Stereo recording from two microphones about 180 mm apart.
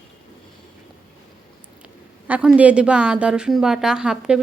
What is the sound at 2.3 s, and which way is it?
A woman's voice, 10° right (ahead or behind).